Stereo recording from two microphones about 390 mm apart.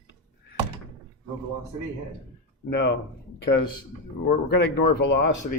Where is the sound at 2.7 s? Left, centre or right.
Left.